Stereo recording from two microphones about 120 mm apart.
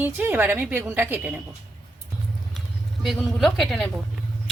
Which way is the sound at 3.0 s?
Centre (ahead or behind).